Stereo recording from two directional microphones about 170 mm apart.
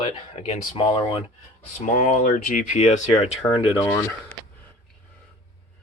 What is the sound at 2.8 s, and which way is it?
Speech, 40° left (ahead or behind).